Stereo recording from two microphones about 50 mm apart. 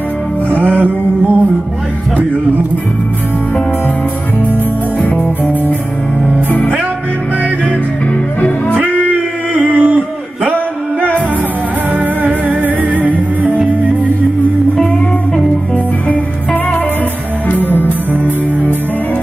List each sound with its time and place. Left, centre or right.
0.5 s music: right
5.0 s music: left
9.0 s music: right
10.5 s music: right
15.3 s music: left
17.6 s music: right